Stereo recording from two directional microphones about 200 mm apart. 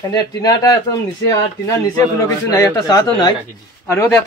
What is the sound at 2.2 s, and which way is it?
A man's voice, 15° left (ahead or behind).